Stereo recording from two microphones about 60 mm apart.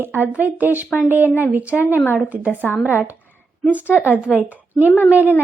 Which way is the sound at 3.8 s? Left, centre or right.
Left.